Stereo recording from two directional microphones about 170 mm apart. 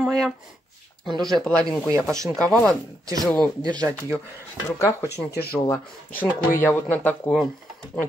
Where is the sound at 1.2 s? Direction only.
5° left (ahead or behind).